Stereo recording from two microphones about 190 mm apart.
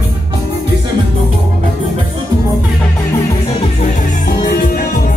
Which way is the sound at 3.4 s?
35° left (ahead or behind).